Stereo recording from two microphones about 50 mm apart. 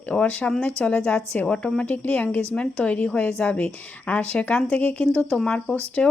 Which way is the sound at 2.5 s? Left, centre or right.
Left.